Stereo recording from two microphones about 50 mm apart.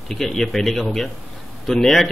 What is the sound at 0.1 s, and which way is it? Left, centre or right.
Speech, centre.